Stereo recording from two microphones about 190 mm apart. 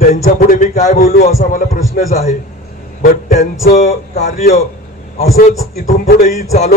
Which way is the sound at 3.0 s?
50° left (ahead or behind).